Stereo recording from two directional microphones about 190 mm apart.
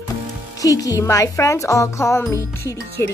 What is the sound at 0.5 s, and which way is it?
Speech, 20° left (ahead or behind).